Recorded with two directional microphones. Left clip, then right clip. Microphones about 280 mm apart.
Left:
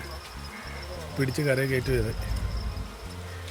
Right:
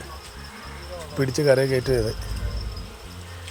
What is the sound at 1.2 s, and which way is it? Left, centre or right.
Speech, centre.